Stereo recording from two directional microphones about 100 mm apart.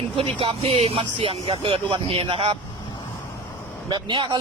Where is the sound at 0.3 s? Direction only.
65° right (ahead or behind).